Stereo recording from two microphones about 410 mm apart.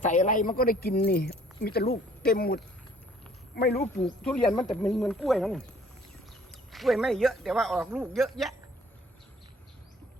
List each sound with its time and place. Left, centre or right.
0.0 s speech: centre
3.8 s speech: centre